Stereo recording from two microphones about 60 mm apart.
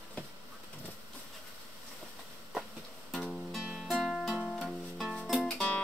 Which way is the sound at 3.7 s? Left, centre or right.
Centre.